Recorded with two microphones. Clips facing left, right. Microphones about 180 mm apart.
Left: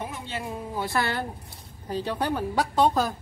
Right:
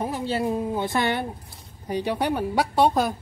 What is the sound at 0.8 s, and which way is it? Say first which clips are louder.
Speech: right 3 dB; 20° right (ahead or behind).